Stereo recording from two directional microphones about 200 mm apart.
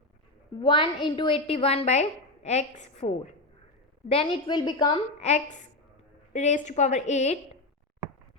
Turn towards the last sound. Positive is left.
turn(degrees=35)  # may be behind; listen again after turning